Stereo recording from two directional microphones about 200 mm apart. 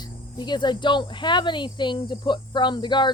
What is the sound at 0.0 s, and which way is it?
Speech, 20° left (ahead or behind).